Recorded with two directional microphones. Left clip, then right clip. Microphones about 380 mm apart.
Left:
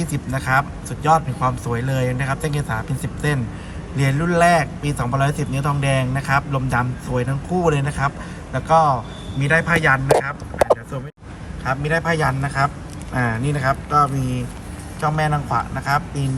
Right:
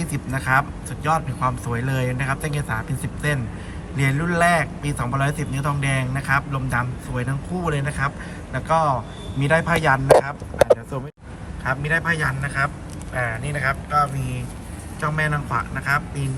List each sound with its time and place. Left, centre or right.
0.0 s a man's voice: centre
15.0 s a man's voice: centre